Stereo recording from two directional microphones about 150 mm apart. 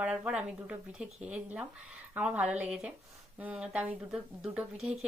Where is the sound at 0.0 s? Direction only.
5° right (ahead or behind).